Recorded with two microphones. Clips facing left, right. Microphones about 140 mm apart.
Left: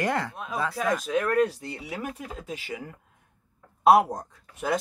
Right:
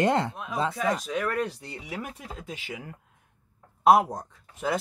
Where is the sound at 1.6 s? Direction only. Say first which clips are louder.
Left 2 dB; centre (ahead or behind).